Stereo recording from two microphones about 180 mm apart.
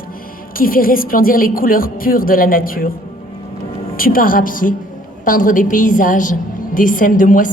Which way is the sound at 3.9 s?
55° left (ahead or behind).